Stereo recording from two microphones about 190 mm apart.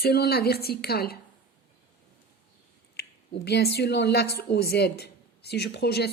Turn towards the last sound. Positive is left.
turn(degrees=60)  # may be behind; listen again after turning